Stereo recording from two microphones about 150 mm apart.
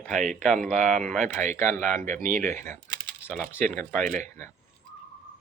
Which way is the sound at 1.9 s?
60° right (ahead or behind).